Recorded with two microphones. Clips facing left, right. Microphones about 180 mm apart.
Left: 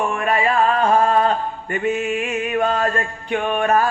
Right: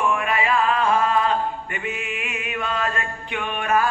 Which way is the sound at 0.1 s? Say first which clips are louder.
Left 3 dB; 40° left (ahead or behind).